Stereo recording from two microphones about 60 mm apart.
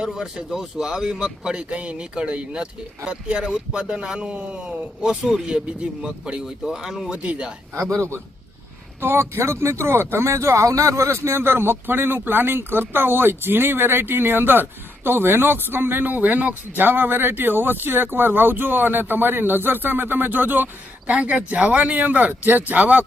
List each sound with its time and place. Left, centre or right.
0.0 s speech: centre
7.9 s a man's voice: right
21.1 s speech: centre